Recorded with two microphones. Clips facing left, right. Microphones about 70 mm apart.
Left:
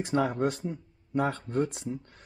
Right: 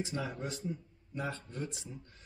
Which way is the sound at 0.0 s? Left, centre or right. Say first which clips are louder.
Left 11 dB; left.